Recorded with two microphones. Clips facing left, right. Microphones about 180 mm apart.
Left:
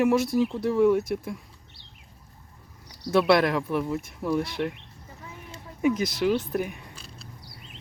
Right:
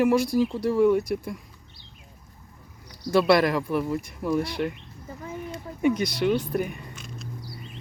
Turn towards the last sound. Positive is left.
turn(degrees=35)  # may be behind; listen again after turning